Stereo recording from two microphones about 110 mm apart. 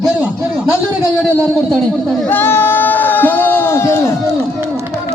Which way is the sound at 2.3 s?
20° left (ahead or behind).